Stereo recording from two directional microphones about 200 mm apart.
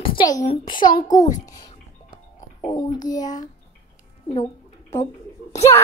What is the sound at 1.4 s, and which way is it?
Music, 20° left (ahead or behind).